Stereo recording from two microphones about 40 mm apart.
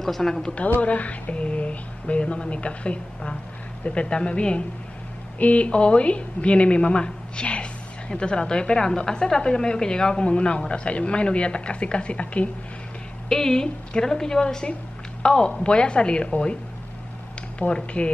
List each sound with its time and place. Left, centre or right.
0.0 s a woman's voice: centre
0.7 s a woman's voice: left
13.3 s a woman's voice: centre